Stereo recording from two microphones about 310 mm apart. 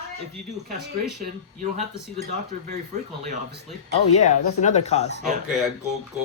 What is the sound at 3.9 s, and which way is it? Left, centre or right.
Speech, left.